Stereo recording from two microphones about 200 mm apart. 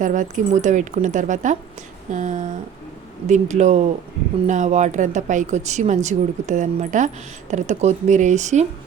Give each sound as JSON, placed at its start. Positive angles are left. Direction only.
{"t": 0.0, "sound": "speech", "side_deg": -40}